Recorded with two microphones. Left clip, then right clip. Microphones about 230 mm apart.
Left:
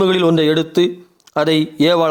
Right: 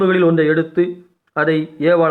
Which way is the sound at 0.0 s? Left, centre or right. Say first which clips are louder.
Even; left.